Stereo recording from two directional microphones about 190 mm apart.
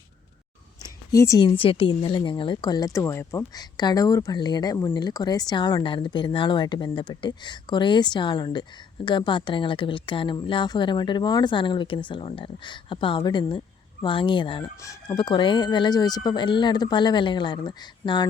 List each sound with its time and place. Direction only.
1.1 s speech: 15° left (ahead or behind)